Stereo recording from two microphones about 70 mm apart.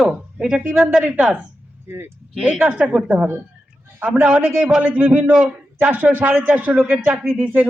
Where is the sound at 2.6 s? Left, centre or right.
Centre.